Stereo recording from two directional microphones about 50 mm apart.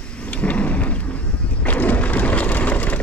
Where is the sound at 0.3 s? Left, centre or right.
Left.